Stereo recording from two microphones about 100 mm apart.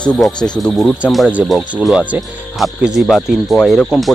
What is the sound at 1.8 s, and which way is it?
Speech, 10° right (ahead or behind).